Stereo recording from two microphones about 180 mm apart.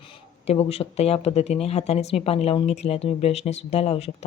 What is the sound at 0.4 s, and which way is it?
Speech, 35° left (ahead or behind).